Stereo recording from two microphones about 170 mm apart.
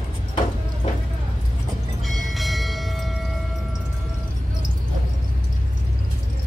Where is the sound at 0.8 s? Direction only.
45° left (ahead or behind).